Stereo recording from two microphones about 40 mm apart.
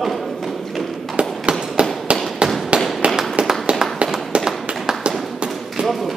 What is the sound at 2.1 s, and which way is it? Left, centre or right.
Firecracker, right.